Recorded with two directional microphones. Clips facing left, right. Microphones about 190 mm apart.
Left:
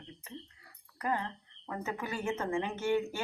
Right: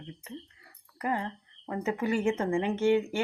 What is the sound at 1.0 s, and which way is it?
Speech, 25° right (ahead or behind).